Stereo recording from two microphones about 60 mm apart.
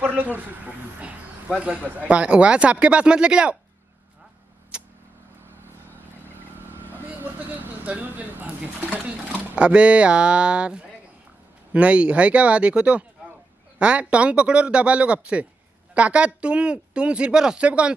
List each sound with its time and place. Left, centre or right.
0.1 s speech: right
1.6 s speech: right
4.7 s vehicle: centre
7.6 s speech: right